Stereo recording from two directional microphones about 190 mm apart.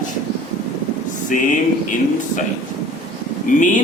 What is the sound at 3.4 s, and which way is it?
Speech, 40° left (ahead or behind).